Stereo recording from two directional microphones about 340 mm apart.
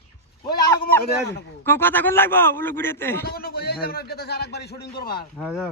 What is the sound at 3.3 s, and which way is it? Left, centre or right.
A man's voice, left.